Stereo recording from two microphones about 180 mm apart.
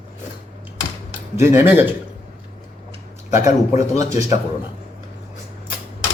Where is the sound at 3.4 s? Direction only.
20° right (ahead or behind).